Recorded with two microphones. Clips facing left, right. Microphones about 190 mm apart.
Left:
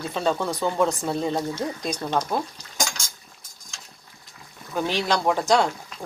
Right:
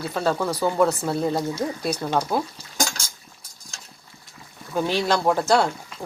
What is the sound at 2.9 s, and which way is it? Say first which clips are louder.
Liquid: right 1 dB; 35° right (ahead or behind).